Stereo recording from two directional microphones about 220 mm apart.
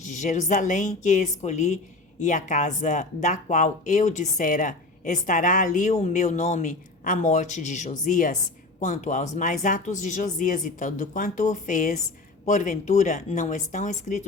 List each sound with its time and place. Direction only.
0.0 s speech: 35° left (ahead or behind)